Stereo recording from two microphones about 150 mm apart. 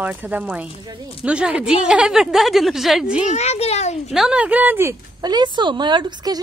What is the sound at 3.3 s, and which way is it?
Speech, 45° left (ahead or behind).